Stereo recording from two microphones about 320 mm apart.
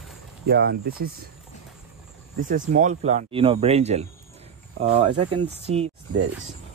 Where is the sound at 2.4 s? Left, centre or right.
Right.